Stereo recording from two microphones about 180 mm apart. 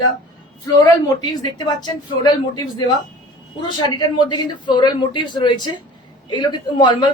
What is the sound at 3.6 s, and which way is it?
Speech, 25° left (ahead or behind).